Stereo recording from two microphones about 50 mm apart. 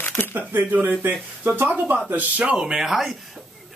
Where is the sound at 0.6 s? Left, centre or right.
Right.